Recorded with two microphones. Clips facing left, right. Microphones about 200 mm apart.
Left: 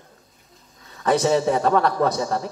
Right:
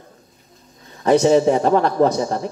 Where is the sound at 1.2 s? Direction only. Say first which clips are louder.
Right 4 dB; 30° right (ahead or behind).